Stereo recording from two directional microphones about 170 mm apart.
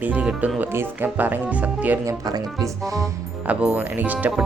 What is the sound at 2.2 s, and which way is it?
Speech, 20° right (ahead or behind).